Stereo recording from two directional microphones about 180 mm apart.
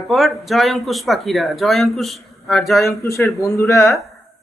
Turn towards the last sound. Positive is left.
turn(degrees=15)  # may be behind; listen again after turning